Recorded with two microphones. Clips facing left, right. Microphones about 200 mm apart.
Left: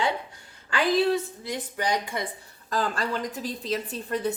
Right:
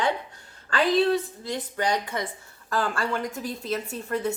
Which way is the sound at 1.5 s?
10° left (ahead or behind).